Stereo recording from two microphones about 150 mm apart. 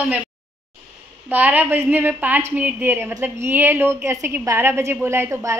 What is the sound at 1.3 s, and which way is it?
A woman's voice, 10° right (ahead or behind).